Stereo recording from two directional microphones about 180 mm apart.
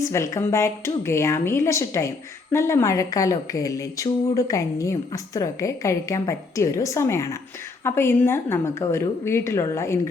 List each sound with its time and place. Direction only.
0.0 s speech: 15° left (ahead or behind)